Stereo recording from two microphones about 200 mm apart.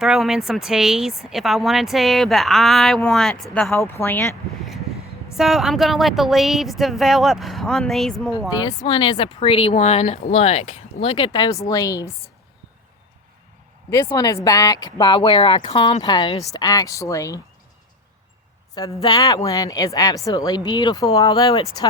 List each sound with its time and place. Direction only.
0.0 s speech: centre (ahead or behind)
8.4 s speech: 20° left (ahead or behind)
13.9 s speech: 15° left (ahead or behind)
18.7 s speech: 20° left (ahead or behind)